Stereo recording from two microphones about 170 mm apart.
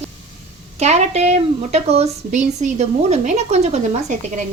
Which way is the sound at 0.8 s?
40° right (ahead or behind).